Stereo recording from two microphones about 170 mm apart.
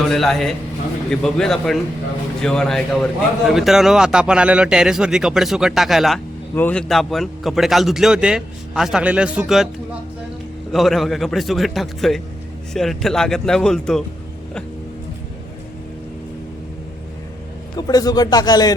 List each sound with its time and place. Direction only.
0.1 s a man's voice: centre (ahead or behind)
6.5 s a man's voice: 10° left (ahead or behind)
10.7 s a man's voice: centre (ahead or behind)
17.7 s speech: 20° left (ahead or behind)